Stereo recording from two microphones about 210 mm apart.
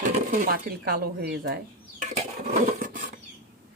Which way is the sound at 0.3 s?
45° right (ahead or behind).